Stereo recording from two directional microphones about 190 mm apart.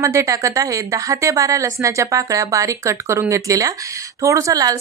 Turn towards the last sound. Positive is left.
turn(degrees=-20)  # may be behind; listen again after turning